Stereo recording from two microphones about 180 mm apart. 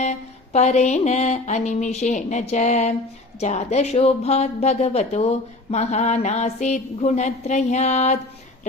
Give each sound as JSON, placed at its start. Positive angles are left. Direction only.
{"t": 0.0, "sound": "speech", "side_deg": 40}